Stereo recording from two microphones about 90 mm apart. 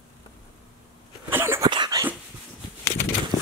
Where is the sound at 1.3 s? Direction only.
25° right (ahead or behind).